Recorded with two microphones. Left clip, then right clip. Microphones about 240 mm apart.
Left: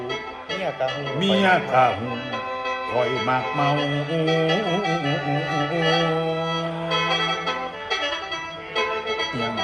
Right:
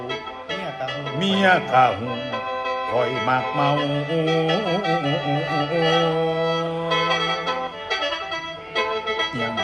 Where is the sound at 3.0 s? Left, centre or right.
Centre.